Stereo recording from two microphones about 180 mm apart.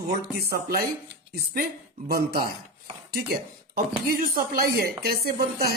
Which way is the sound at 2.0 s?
60° right (ahead or behind).